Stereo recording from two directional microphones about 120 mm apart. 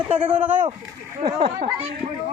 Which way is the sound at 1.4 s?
60° right (ahead or behind).